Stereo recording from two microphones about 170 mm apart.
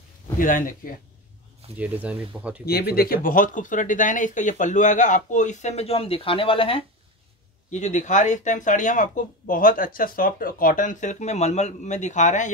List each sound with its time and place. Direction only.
0.4 s speech: 50° left (ahead or behind)
1.8 s speech: 10° right (ahead or behind)
2.6 s speech: 65° left (ahead or behind); by 6.8 s 30° left (ahead or behind)
7.7 s speech: 45° left (ahead or behind)